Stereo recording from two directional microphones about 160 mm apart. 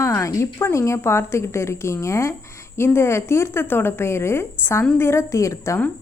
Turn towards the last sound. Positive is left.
turn(degrees=15)  # may be behind; listen again after turning